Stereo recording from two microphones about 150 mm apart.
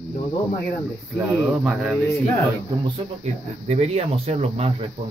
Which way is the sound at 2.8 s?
45° right (ahead or behind).